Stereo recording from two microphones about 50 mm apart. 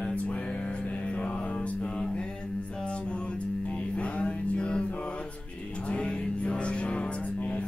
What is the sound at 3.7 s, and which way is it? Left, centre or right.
Mantra, left.